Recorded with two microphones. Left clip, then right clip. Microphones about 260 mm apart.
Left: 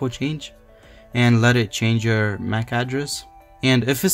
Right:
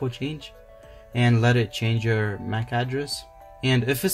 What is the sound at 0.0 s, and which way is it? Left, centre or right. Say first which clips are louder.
Speech: left 4 dB; left.